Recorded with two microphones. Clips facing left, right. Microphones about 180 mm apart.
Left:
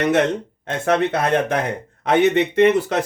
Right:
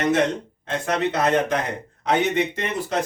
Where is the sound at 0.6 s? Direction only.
55° left (ahead or behind).